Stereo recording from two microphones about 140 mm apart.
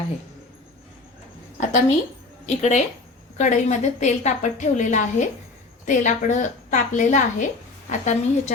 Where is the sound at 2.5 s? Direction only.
55° left (ahead or behind).